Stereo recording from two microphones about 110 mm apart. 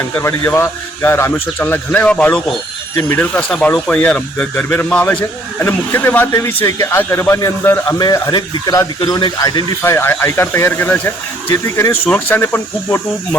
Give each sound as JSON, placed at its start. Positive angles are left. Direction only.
{"t": 0.0, "sound": "a man's voice", "side_deg": 25}
{"t": 2.9, "sound": "a man's voice", "side_deg": 20}
{"t": 7.9, "sound": "speech", "side_deg": 35}
{"t": 9.8, "sound": "a man's voice", "side_deg": 25}